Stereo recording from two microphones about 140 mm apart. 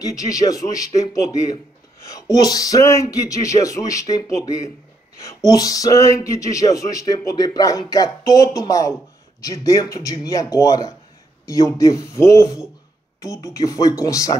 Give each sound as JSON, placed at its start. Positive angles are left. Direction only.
{"t": 0.0, "sound": "a man's voice", "side_deg": 25}